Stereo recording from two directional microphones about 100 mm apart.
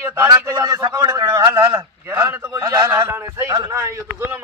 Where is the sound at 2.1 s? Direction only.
25° right (ahead or behind).